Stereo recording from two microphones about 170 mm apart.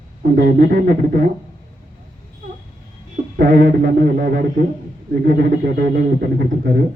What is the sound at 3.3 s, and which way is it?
A man's voice, 55° right (ahead or behind).